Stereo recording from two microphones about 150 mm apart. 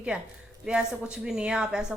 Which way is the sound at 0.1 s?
5° right (ahead or behind).